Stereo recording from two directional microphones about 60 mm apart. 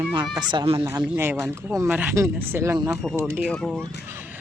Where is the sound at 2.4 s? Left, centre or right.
Right.